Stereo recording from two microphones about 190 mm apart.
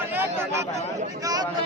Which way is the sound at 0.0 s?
10° right (ahead or behind).